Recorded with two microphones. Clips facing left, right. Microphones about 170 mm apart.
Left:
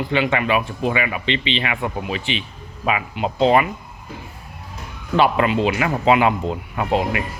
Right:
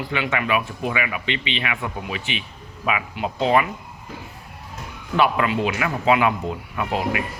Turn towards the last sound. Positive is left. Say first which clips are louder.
# left 3 dB
turn(degrees=30)  # may be behind; listen again after turning